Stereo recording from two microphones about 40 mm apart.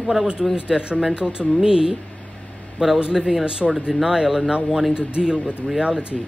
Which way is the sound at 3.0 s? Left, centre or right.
Centre.